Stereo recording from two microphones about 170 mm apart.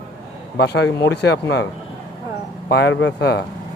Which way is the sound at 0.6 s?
80° left.